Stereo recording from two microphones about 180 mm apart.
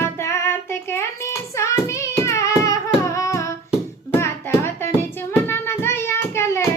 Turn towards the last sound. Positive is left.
turn(degrees=15)  # may be behind; listen again after turning